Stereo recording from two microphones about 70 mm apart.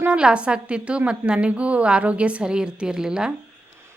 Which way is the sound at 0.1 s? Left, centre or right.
Centre.